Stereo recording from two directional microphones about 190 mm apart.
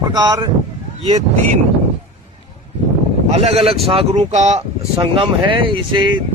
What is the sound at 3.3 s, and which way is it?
Speech, 30° right (ahead or behind).